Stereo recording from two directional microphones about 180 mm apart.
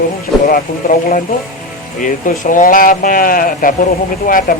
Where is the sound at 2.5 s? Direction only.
50° left (ahead or behind).